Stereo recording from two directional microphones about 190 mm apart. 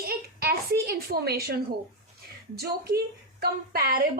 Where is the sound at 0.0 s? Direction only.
55° right (ahead or behind).